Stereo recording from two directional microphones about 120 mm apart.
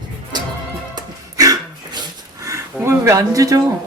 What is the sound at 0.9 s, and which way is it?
Music, 30° right (ahead or behind).